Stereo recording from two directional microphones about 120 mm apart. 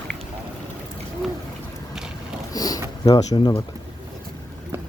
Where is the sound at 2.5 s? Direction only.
30° left (ahead or behind).